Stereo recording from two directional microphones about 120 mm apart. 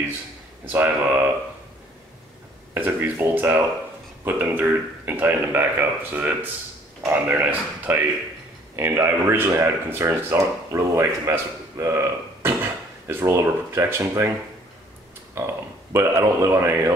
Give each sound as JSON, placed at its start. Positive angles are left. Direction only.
{"t": 0.7, "sound": "a man's voice", "side_deg": -15}
{"t": 2.7, "sound": "a man's voice", "side_deg": -15}
{"t": 15.3, "sound": "speech", "side_deg": -25}